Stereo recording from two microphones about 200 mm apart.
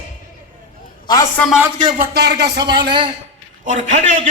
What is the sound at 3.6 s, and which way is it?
Speech, 40° right (ahead or behind).